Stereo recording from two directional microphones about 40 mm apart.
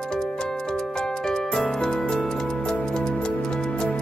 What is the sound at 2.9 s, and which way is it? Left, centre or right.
Music, centre.